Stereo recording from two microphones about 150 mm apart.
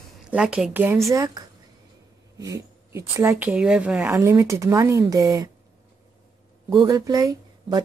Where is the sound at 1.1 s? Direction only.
25° right (ahead or behind).